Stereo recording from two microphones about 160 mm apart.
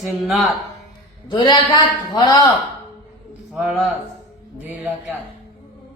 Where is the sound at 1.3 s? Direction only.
25° left (ahead or behind).